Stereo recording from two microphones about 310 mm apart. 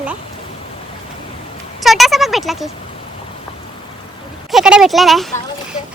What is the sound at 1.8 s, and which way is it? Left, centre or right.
Speech, centre.